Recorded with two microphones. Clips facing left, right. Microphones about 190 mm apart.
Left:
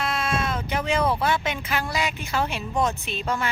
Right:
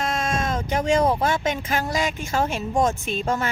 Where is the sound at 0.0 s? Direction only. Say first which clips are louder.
Right 1 dB; 45° right (ahead or behind).